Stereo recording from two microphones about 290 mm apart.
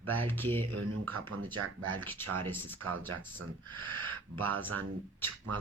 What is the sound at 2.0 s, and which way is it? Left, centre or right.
Speech, centre.